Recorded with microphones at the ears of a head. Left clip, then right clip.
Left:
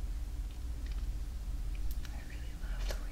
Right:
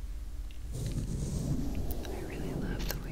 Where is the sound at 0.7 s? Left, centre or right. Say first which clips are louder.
Right 16 dB; right.